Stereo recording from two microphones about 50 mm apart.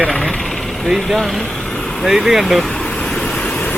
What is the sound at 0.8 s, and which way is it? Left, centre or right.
Speech, centre.